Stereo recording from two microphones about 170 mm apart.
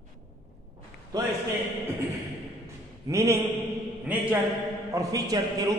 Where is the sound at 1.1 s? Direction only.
25° right (ahead or behind).